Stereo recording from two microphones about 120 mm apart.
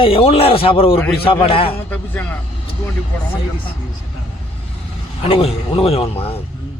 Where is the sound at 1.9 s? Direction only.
15° left (ahead or behind).